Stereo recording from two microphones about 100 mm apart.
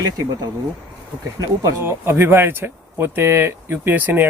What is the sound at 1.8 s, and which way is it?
Speech, 25° right (ahead or behind).